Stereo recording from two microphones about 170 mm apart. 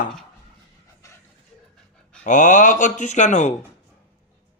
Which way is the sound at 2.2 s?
45° left (ahead or behind).